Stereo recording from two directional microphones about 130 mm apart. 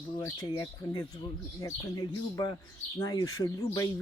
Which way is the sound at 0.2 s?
20° left (ahead or behind).